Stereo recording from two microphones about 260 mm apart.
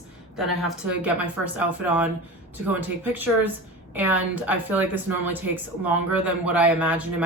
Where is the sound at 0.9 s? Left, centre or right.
Centre.